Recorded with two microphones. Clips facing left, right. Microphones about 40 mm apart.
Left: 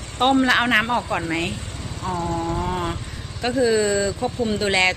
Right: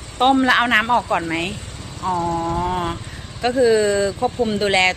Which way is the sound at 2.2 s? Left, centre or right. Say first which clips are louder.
Right 2 dB; right.